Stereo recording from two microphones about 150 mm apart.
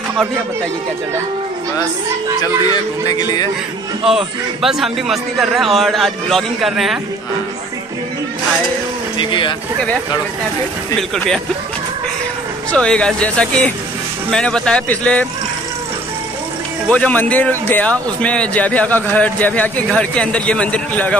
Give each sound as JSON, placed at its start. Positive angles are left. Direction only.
{"t": 3.1, "sound": "a man's voice", "side_deg": 25}
{"t": 4.0, "sound": "a man's voice", "side_deg": -5}
{"t": 9.2, "sound": "speech", "side_deg": 30}
{"t": 11.0, "sound": "a man's voice", "side_deg": 5}
{"t": 12.7, "sound": "a man's voice", "side_deg": 5}
{"t": 16.9, "sound": "a man's voice", "side_deg": 10}